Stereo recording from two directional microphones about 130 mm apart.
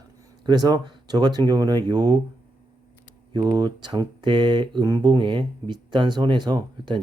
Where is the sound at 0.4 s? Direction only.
30° right (ahead or behind).